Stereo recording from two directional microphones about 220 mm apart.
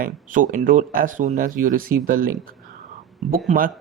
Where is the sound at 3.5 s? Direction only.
40° right (ahead or behind).